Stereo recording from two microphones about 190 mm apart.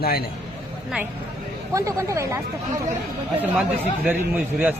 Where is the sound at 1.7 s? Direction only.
15° right (ahead or behind).